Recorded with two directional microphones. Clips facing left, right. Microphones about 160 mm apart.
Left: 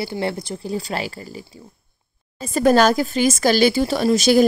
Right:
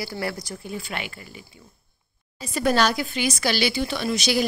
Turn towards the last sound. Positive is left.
turn(degrees=45)  # may be behind; listen again after turning